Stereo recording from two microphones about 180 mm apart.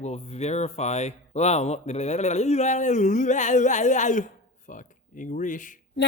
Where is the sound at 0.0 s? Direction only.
35° left (ahead or behind).